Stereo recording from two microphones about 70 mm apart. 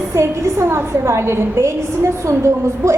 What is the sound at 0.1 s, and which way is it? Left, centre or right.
A woman's voice, right.